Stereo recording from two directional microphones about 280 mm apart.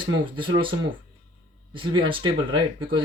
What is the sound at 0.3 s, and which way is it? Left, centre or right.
Speech, centre.